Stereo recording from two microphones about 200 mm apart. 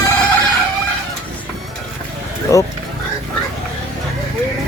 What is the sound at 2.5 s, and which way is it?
Speech, 15° left (ahead or behind).